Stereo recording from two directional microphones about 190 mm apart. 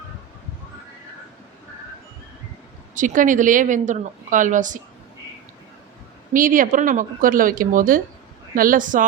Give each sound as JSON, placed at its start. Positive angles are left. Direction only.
{"t": 2.9, "sound": "a woman's voice", "side_deg": -45}
{"t": 6.3, "sound": "a woman's voice", "side_deg": -45}